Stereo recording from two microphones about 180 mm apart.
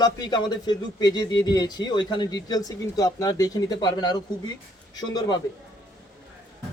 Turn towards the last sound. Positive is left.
turn(degrees=25)  # may be behind; listen again after turning